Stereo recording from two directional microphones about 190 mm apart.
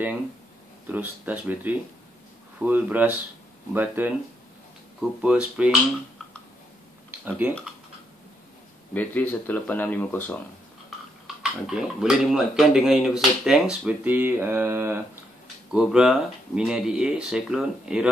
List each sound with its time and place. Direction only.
0.8 s speech: 10° right (ahead or behind)
5.2 s speech: 5° right (ahead or behind)
8.9 s speech: 10° left (ahead or behind)
11.6 s speech: 5° right (ahead or behind)